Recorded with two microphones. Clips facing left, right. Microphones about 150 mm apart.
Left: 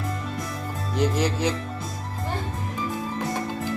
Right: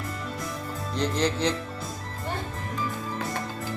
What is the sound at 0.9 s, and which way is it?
Music, 10° left (ahead or behind).